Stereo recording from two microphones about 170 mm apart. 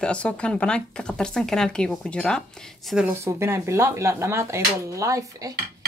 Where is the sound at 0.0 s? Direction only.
5° left (ahead or behind).